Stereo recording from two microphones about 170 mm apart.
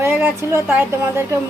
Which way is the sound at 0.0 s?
15° right (ahead or behind).